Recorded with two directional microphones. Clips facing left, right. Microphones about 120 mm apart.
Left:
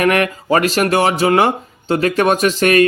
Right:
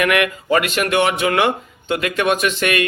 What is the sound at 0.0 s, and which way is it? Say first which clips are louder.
Speech: left 3 dB; 35° left (ahead or behind).